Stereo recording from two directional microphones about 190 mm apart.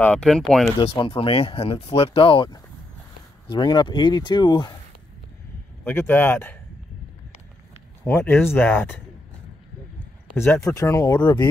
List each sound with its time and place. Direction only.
0.0 s speech: 5° left (ahead or behind)
0.7 s speech: 25° left (ahead or behind)
5.9 s speech: 10° left (ahead or behind)
8.0 s speech: 10° left (ahead or behind)
10.3 s speech: 10° left (ahead or behind)